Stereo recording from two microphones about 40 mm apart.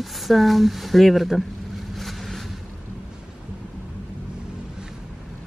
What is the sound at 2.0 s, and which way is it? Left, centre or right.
Vehicle, centre.